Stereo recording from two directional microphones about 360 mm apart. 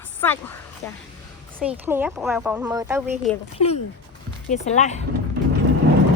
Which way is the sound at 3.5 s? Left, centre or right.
Centre.